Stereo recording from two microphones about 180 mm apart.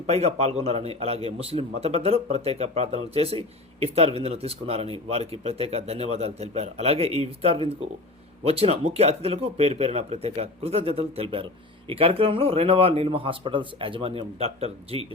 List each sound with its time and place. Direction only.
0.1 s a man's voice: 35° right (ahead or behind)